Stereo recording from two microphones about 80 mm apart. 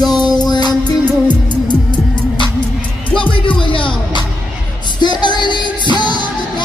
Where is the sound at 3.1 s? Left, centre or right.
Left.